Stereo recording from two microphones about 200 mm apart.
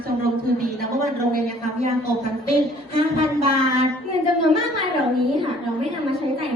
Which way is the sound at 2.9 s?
30° right (ahead or behind).